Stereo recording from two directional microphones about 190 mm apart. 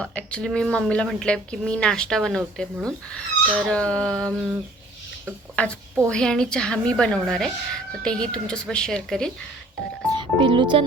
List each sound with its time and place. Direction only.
0.0 s a woman's voice: 5° left (ahead or behind)
5.6 s a woman's voice: 5° left (ahead or behind)
10.1 s speech: 25° right (ahead or behind)